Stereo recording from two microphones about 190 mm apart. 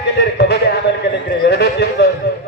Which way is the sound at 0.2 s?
60° left (ahead or behind).